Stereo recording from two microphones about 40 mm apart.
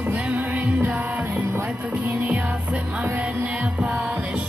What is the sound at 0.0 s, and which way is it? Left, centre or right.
Music, right.